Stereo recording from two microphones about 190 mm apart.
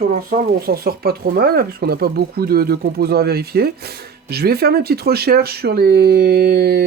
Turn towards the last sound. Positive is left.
turn(degrees=-55)  # may be behind; listen again after turning